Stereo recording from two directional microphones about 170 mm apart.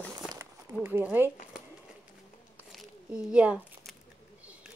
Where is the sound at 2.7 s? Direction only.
5° right (ahead or behind).